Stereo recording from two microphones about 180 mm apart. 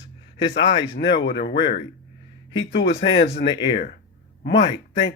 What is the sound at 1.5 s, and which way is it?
Speech, 30° left (ahead or behind).